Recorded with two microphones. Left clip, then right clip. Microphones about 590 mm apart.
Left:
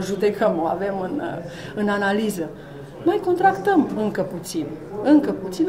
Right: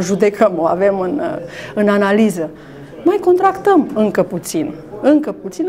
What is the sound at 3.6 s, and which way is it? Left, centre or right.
Speech, right.